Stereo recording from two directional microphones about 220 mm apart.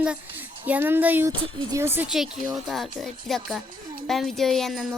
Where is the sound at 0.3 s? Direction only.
10° right (ahead or behind).